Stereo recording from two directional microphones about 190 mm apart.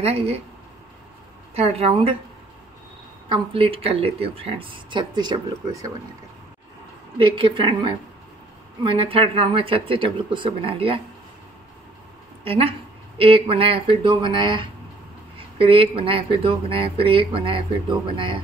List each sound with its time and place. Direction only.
0.0 s a woman's voice: 30° right (ahead or behind)
1.5 s a woman's voice: 30° right (ahead or behind)
3.3 s speech: 30° right (ahead or behind)
7.2 s speech: 25° right (ahead or behind)
12.4 s a woman's voice: 30° right (ahead or behind)